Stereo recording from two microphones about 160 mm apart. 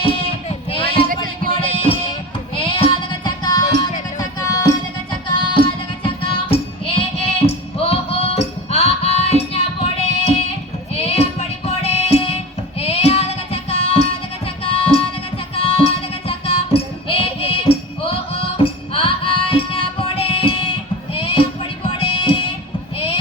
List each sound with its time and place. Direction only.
0.0 s a sound: 35° left (ahead or behind)
1.1 s music: 60° right (ahead or behind)
1.5 s music: 35° left (ahead or behind)
10.9 s music: 40° left (ahead or behind)
12.8 s child singing: 40° left (ahead or behind)
14.6 s music: 35° left (ahead or behind)